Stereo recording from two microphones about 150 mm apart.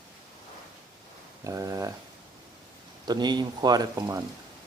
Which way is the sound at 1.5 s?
20° right (ahead or behind).